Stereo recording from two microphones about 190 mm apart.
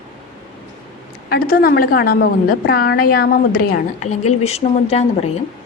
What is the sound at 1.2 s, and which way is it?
A woman's voice, 55° left (ahead or behind).